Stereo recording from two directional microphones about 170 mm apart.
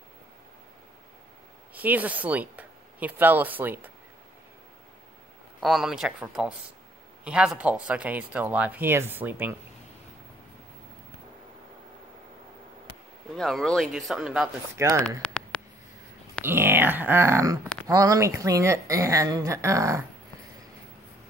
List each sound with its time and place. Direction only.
1.7 s speech: 10° right (ahead or behind)
5.6 s speech: centre (ahead or behind)
13.4 s speech: centre (ahead or behind)
14.8 s speech: 15° right (ahead or behind)
15.0 s a sound: 5° left (ahead or behind)
16.4 s a woman's voice: 15° right (ahead or behind)